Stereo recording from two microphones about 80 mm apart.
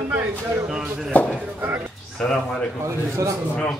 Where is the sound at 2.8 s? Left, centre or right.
Right.